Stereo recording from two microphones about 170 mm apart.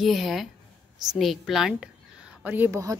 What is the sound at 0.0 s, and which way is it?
A woman's voice, centre (ahead or behind).